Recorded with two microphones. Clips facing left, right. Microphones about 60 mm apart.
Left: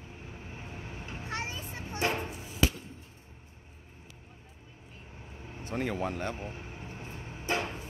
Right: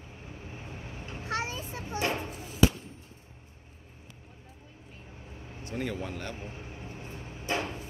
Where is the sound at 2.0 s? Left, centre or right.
Centre.